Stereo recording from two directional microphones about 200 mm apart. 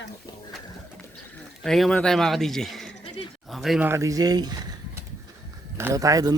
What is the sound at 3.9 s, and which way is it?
A man's voice, 15° right (ahead or behind).